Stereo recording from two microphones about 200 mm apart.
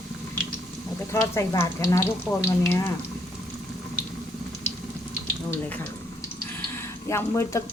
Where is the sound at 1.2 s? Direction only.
15° left (ahead or behind).